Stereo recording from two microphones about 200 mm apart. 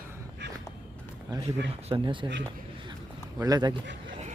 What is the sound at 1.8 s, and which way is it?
Speech, 25° right (ahead or behind).